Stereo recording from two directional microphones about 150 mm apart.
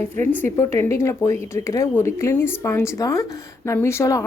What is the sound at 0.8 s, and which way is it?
Speech, 20° left (ahead or behind).